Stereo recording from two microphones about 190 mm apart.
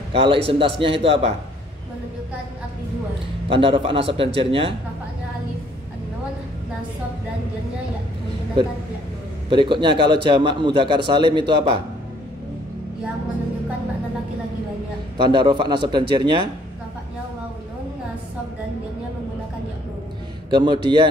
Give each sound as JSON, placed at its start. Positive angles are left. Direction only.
{"t": 0.1, "sound": "a man's voice", "side_deg": -30}
{"t": 3.4, "sound": "a man's voice", "side_deg": -30}
{"t": 9.5, "sound": "a man's voice", "side_deg": -25}
{"t": 15.2, "sound": "a man's voice", "side_deg": -25}
{"t": 20.4, "sound": "a man's voice", "side_deg": -25}